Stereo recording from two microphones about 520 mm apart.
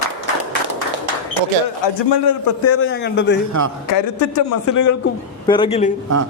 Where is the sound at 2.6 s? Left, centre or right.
Left.